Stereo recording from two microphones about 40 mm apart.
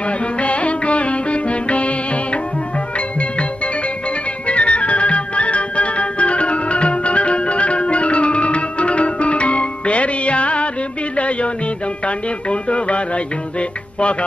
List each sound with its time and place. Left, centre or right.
0.4 s music: left